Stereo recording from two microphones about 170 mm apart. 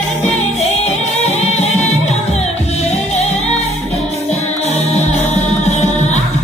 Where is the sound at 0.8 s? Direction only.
40° left (ahead or behind).